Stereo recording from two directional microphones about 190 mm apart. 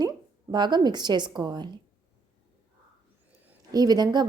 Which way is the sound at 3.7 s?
20° right (ahead or behind).